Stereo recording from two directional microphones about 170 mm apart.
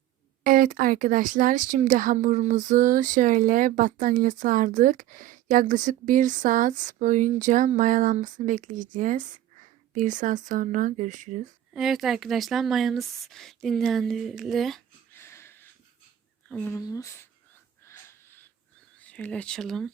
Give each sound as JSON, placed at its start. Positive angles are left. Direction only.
{"t": 0.4, "sound": "speech", "side_deg": -55}
{"t": 11.7, "sound": "speech", "side_deg": 0}
{"t": 15.1, "sound": "a sound", "side_deg": 15}
{"t": 16.5, "sound": "speech", "side_deg": 10}
{"t": 17.8, "sound": "wheeze", "side_deg": 15}
{"t": 18.9, "sound": "speech", "side_deg": 10}